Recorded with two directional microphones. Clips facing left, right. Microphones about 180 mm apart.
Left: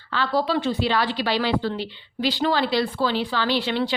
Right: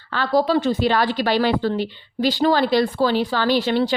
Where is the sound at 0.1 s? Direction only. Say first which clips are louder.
Right 4 dB; 45° right (ahead or behind).